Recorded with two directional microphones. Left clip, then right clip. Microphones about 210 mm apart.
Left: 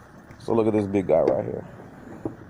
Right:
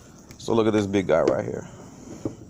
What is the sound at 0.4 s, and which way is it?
Speech, 5° right (ahead or behind).